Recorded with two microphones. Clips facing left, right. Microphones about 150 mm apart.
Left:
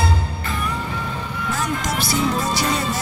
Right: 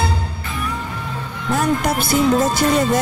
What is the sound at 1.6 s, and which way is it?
Speech, 60° right (ahead or behind).